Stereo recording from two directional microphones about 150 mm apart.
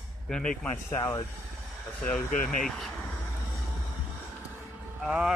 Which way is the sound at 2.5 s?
5° left (ahead or behind).